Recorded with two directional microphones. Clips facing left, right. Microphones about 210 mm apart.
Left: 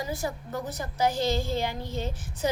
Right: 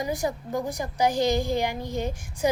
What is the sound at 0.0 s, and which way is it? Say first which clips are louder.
A woman's voice: right 4 dB; 15° right (ahead or behind).